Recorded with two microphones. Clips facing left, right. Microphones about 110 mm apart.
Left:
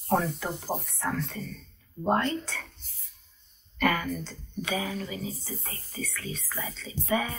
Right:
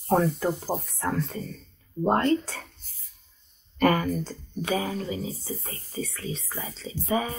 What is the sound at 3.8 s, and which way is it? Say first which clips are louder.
Speech: right 5 dB; 45° right (ahead or behind).